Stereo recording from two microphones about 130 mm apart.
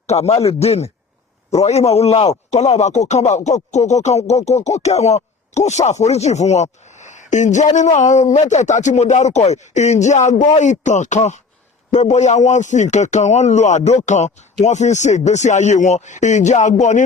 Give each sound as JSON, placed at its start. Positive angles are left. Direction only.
{"t": 0.1, "sound": "speech", "side_deg": 55}